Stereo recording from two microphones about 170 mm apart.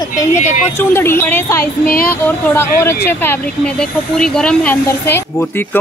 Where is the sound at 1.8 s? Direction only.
60° left (ahead or behind).